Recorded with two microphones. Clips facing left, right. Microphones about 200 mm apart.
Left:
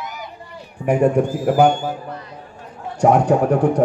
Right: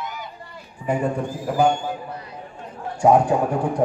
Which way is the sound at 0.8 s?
75° left (ahead or behind).